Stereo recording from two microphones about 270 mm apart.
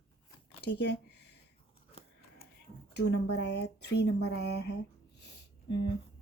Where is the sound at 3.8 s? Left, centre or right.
Left.